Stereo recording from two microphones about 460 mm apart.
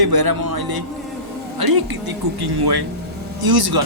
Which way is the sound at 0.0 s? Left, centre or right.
Right.